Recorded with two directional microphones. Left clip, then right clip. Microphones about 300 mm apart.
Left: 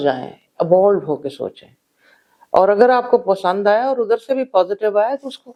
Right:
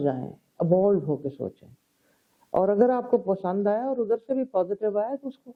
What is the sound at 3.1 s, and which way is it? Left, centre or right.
Speech, centre.